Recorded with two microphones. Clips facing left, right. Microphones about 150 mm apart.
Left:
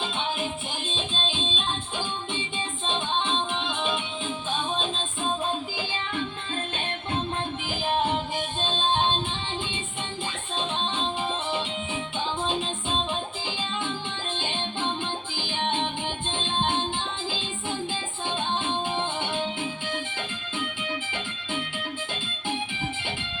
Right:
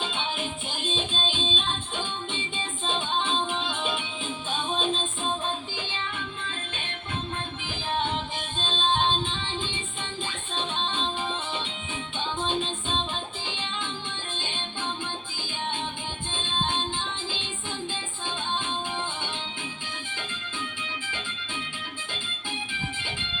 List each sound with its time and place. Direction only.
0.9 s music: centre (ahead or behind)
12.4 s music: 5° left (ahead or behind)
14.3 s music: 15° left (ahead or behind)
16.3 s music: 15° left (ahead or behind)
18.6 s music: 20° left (ahead or behind)